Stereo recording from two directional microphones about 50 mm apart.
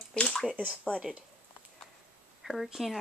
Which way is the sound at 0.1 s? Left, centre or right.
Centre.